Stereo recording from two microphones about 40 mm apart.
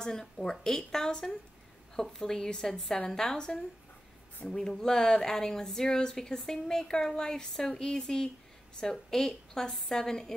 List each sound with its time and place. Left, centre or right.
0.0 s speech: centre